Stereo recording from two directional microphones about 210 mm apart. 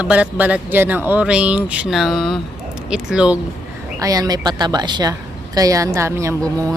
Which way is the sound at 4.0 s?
15° right (ahead or behind).